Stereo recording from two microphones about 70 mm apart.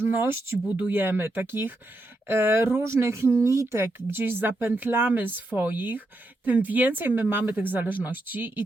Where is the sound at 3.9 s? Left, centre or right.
Right.